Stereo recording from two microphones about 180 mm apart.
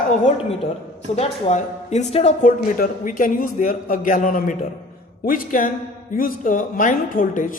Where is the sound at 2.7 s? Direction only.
50° left (ahead or behind).